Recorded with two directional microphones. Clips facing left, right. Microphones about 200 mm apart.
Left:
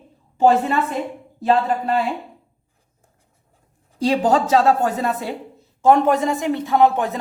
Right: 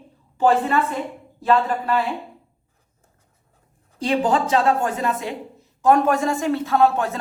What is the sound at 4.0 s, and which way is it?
Speech, 40° left (ahead or behind).